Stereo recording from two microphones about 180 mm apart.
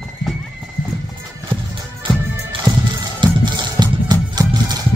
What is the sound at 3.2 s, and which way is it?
Music, 25° right (ahead or behind).